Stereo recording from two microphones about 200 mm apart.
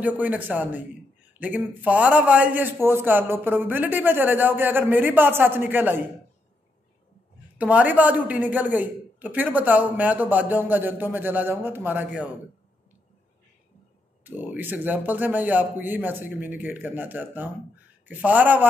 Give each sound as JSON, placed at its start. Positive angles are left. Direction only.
{"t": 0.0, "sound": "speech", "side_deg": -10}
{"t": 7.5, "sound": "speech", "side_deg": -5}
{"t": 14.2, "sound": "speech", "side_deg": -10}